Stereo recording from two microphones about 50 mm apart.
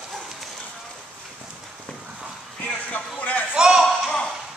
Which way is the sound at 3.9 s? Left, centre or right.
Centre.